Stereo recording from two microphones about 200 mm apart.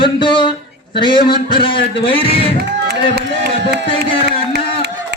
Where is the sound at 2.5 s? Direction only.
55° right (ahead or behind).